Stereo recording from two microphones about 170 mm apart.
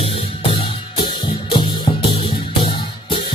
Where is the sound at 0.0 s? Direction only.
35° left (ahead or behind).